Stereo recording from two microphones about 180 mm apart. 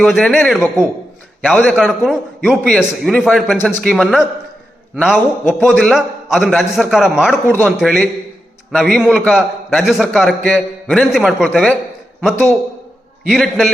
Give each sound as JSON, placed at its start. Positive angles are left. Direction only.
{"t": 0.0, "sound": "a man's voice", "side_deg": 0}